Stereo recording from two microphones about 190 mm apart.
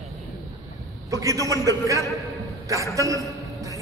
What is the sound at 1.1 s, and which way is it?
Speech, 15° right (ahead or behind).